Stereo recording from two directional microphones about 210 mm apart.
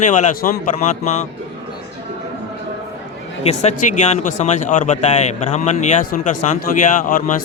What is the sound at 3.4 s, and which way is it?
A man's voice, 30° left (ahead or behind).